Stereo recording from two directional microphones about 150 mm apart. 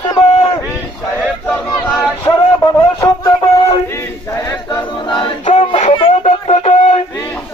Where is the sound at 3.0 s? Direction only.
25° left (ahead or behind).